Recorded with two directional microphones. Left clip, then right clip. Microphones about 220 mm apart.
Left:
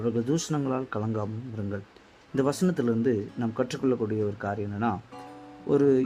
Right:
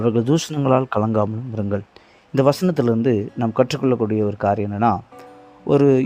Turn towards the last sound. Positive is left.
turn(degrees=-35)  # may be behind; listen again after turning